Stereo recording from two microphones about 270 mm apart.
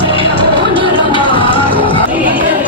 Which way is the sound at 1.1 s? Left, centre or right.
Centre.